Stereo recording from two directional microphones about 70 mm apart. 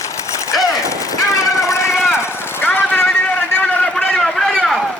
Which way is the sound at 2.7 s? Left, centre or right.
Left.